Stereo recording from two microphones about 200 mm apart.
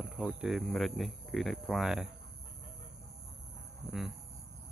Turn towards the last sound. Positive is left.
turn(degrees=0)  # may be behind; listen again after turning